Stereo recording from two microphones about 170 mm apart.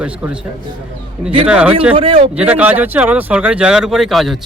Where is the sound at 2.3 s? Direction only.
10° right (ahead or behind).